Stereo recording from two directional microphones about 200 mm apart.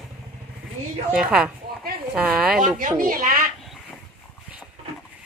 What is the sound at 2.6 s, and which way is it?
Speech, 40° right (ahead or behind).